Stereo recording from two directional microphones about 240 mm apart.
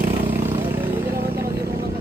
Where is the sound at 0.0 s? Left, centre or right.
Right.